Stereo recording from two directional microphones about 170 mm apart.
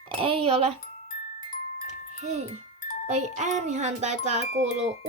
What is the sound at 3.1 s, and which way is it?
Speech, 45° right (ahead or behind).